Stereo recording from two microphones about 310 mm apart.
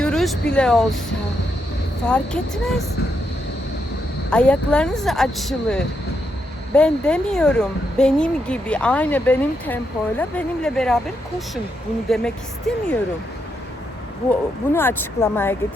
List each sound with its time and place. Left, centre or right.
0.0 s a sound: centre
0.5 s speech: centre
2.0 s speech: centre
4.3 s speech: centre
14.3 s speech: centre